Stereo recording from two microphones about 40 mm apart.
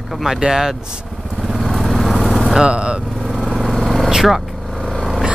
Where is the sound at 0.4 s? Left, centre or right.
Centre.